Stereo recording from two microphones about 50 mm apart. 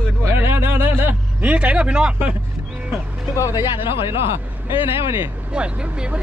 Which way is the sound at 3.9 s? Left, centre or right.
Right.